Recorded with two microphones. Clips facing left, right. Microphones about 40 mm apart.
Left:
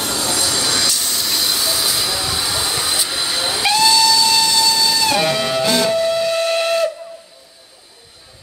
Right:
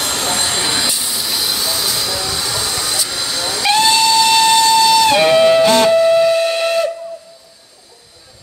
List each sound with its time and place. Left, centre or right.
0.0 s train: right
1.0 s vehicle: centre
3.7 s steam whistle: right
5.9 s steam whistle: centre